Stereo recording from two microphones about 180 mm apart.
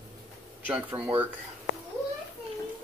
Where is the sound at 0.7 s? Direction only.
10° right (ahead or behind).